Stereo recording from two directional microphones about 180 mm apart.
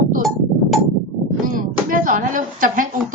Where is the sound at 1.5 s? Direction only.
50° right (ahead or behind).